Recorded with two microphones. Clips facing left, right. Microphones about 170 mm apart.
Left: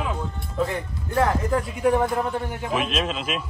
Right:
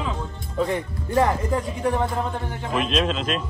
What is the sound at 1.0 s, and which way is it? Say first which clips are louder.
Speech: right 1 dB; 15° right (ahead or behind).